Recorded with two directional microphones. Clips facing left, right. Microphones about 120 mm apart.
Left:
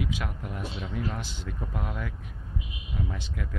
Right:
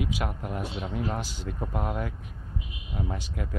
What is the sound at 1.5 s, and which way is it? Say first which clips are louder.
Speech: right 5 dB; 35° right (ahead or behind).